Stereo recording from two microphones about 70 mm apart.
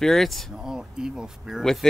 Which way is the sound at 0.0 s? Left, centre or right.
Centre.